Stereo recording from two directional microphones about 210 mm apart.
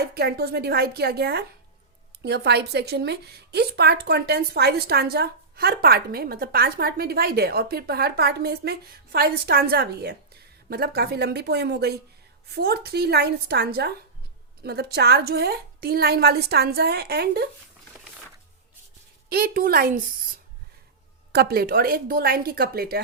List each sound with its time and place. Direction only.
0.0 s a woman's voice: 50° right (ahead or behind)
19.3 s a woman's voice: 45° right (ahead or behind)
21.3 s a woman's voice: 45° right (ahead or behind)